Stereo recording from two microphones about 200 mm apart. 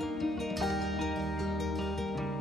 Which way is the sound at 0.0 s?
Centre (ahead or behind).